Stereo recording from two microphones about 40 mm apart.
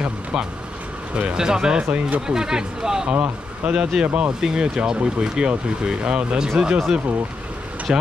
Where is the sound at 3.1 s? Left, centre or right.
Right.